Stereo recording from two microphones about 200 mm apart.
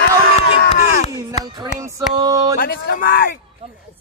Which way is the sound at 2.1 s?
20° right (ahead or behind).